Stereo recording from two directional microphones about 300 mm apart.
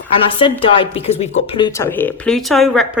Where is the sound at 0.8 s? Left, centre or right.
Centre.